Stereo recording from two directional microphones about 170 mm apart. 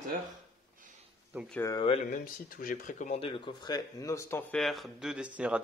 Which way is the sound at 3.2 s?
30° left (ahead or behind).